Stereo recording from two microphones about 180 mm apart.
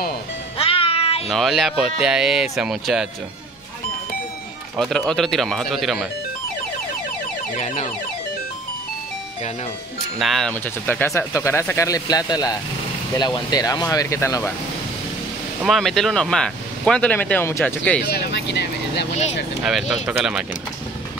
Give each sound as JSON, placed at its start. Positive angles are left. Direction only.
{"t": 0.6, "sound": "music", "side_deg": 30}
{"t": 1.3, "sound": "speech", "side_deg": 0}
{"t": 4.7, "sound": "speech", "side_deg": 0}
{"t": 7.5, "sound": "a sound", "side_deg": 45}
{"t": 10.1, "sound": "speech", "side_deg": 0}
{"t": 15.6, "sound": "speech", "side_deg": 0}
{"t": 18.0, "sound": "speech", "side_deg": 70}
{"t": 19.6, "sound": "speech", "side_deg": -5}